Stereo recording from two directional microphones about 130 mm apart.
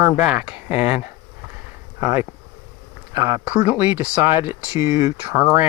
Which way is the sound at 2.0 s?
20° right (ahead or behind).